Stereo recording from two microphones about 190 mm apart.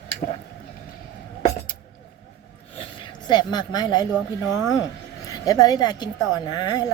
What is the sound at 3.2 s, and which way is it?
Speech, 20° left (ahead or behind).